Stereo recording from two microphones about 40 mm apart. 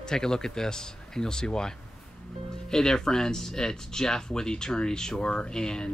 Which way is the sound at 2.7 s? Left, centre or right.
Centre.